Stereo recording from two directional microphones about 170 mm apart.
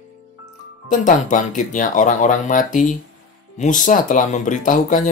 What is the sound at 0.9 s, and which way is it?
Speech, 50° left (ahead or behind).